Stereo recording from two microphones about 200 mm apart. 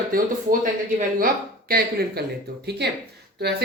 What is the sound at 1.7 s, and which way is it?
Speech, 50° right (ahead or behind).